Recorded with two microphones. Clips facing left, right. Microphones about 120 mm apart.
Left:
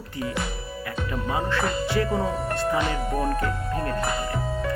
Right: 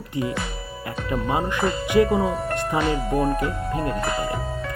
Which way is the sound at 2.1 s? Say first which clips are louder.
Right 3 dB; centre (ahead or behind).